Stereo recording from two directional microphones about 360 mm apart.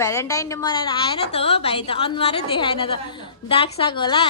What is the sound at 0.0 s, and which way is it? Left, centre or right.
A woman's voice, centre.